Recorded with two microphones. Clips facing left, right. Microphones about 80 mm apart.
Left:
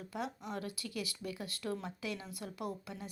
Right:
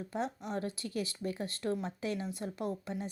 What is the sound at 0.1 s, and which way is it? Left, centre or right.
A woman's voice, right.